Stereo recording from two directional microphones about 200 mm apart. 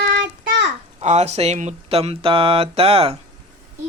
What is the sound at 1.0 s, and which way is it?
Speech, 35° right (ahead or behind).